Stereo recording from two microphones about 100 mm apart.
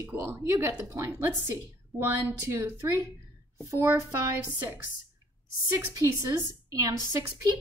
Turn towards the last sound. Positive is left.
turn(degrees=-35)  # may be behind; listen again after turning